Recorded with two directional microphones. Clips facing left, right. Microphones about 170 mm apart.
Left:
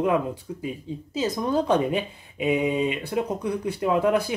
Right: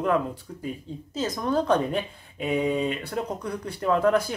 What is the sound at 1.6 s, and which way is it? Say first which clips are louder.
Speech: left 1 dB; 15° left (ahead or behind).